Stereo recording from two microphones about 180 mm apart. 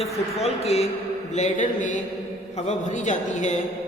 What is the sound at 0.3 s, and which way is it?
Speech, 35° left (ahead or behind).